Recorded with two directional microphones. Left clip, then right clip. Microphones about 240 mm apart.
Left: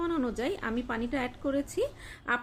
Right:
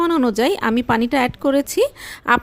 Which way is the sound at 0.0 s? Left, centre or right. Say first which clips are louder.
Right 14 dB; right.